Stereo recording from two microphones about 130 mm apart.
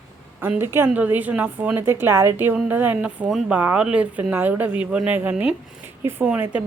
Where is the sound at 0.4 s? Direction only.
15° right (ahead or behind).